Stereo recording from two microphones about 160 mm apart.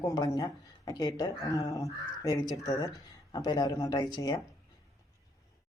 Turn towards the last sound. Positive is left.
turn(degrees=25)  # may be behind; listen again after turning